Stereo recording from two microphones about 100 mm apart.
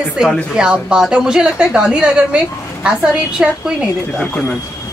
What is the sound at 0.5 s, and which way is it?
A woman's voice, 10° right (ahead or behind).